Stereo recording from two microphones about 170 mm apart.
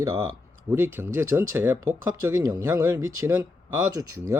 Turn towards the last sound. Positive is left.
turn(degrees=-15)  # may be behind; listen again after turning